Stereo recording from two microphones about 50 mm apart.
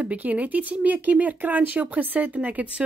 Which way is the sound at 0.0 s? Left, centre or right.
Right.